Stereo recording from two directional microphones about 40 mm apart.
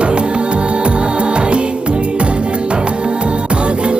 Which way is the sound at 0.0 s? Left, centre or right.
Right.